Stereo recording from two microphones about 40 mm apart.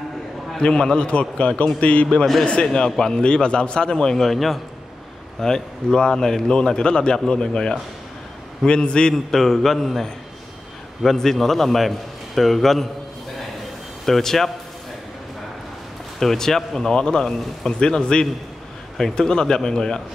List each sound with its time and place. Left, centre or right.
0.6 s a man's voice: left
2.6 s a man's voice: centre
9.1 s a man's voice: centre
11.1 s a man's voice: centre
14.0 s a man's voice: centre
16.2 s a man's voice: centre